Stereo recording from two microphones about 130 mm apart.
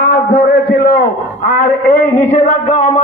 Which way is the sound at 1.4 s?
90° left.